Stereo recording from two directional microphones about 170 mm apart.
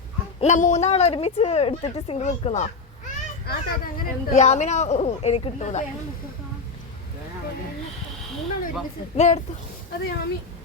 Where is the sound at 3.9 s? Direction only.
40° left (ahead or behind).